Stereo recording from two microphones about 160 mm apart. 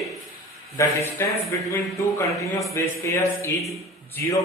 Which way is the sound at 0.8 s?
20° left (ahead or behind).